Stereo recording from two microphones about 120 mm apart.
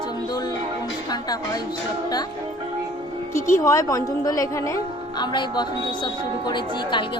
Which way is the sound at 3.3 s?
25° left (ahead or behind).